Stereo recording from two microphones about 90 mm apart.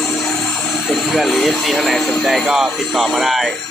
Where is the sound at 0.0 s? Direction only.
5° left (ahead or behind).